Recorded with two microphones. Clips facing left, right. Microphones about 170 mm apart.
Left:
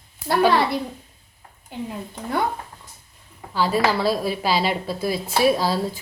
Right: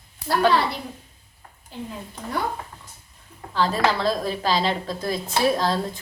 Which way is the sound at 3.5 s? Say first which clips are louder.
Left 1 dB; 10° left (ahead or behind).